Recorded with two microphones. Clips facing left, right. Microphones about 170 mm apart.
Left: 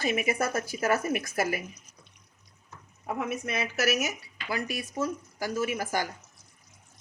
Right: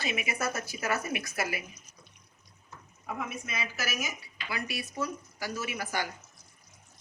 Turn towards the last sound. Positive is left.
turn(degrees=45)  # may be behind; listen again after turning